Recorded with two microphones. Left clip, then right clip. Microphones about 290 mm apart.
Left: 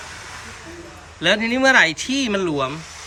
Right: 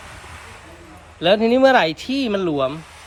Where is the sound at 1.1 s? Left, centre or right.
Centre.